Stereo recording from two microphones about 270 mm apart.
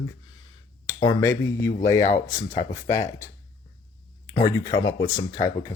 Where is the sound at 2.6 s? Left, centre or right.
Left.